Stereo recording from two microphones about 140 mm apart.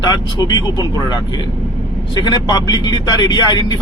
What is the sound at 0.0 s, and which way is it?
Speech, 30° left (ahead or behind).